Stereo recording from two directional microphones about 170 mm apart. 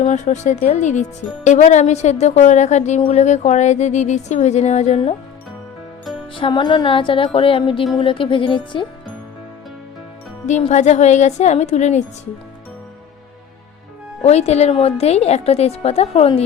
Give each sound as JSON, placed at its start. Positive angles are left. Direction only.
{"t": 0.0, "sound": "a woman's voice", "side_deg": 45}
{"t": 6.3, "sound": "a woman's voice", "side_deg": 30}
{"t": 10.4, "sound": "a woman's voice", "side_deg": 45}
{"t": 14.3, "sound": "a woman's voice", "side_deg": 40}